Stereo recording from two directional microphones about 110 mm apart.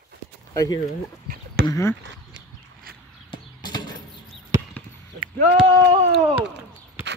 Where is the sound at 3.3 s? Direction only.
40° left (ahead or behind).